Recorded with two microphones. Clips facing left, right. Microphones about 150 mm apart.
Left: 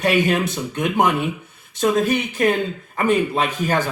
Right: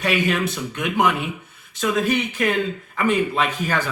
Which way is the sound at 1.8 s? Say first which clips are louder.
Left 3 dB; 45° left (ahead or behind).